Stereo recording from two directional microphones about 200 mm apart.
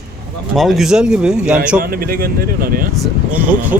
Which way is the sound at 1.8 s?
50° right (ahead or behind).